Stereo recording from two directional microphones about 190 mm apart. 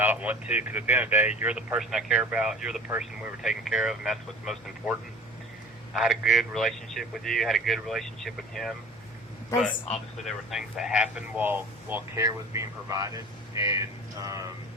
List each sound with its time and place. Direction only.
0.0 s a man's voice: 10° right (ahead or behind)
10.2 s speech: centre (ahead or behind); by 13.7 s 15° right (ahead or behind)
13.7 s a sound: 15° right (ahead or behind)